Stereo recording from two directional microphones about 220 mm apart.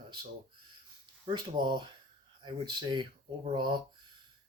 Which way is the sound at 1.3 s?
20° right (ahead or behind).